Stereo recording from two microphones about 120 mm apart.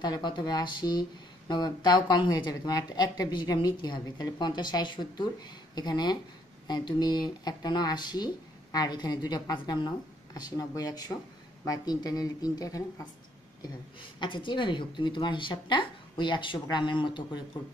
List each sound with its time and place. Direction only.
0.0 s a woman's voice: 40° left (ahead or behind)
14.2 s a woman's voice: 40° left (ahead or behind)